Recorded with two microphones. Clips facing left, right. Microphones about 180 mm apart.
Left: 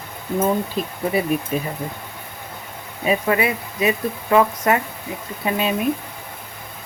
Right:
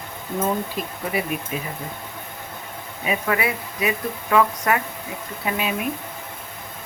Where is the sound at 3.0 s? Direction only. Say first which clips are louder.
Left 4 dB; 25° left (ahead or behind).